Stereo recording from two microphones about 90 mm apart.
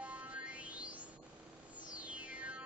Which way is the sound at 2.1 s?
15° right (ahead or behind).